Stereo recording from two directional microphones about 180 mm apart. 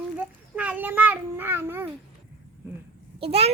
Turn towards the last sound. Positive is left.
turn(degrees=-35)  # may be behind; listen again after turning